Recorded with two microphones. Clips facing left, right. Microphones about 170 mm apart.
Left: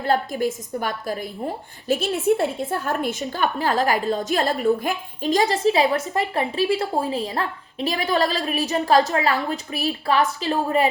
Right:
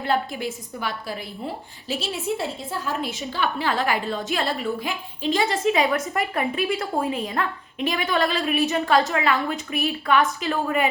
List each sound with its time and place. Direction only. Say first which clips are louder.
0.0 s a woman's voice: left 3 dB; 40° left (ahead or behind)
2.4 s a woman's voice: left 5 dB; 55° left (ahead or behind)
3.2 s a woman's voice: left 1 dB; 45° left (ahead or behind)